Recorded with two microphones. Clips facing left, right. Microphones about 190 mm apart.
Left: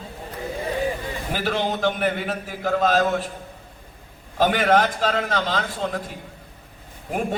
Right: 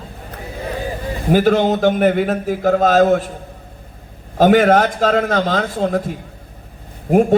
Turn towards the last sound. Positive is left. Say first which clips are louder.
# right 13 dB
turn(degrees=-45)  # may be behind; listen again after turning